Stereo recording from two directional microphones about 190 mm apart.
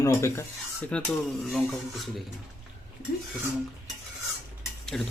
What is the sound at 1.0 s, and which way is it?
Speech, centre (ahead or behind).